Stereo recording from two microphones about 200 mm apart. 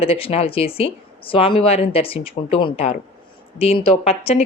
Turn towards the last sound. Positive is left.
turn(degrees=30)  # may be behind; listen again after turning